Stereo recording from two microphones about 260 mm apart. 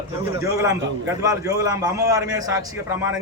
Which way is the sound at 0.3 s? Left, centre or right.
Centre.